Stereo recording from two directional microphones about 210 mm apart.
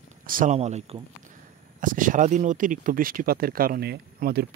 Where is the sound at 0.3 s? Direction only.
35° right (ahead or behind).